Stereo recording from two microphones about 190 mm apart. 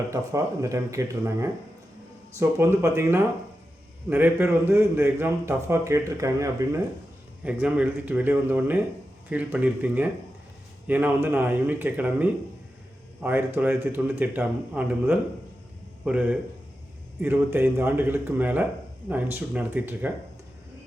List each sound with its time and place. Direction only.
0.1 s a man's voice: 15° right (ahead or behind)